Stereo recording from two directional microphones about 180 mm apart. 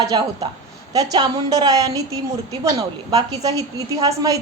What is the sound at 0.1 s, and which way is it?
A woman's voice, 25° right (ahead or behind).